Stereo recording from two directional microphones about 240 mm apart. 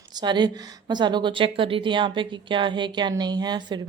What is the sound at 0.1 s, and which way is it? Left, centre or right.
A woman's voice, centre.